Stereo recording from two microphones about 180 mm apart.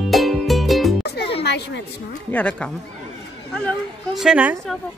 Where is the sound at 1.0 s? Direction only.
65° left (ahead or behind).